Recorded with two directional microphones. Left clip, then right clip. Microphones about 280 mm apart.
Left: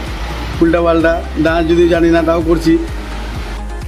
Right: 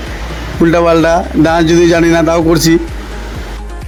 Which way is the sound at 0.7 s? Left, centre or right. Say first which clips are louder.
Right 5 dB; right.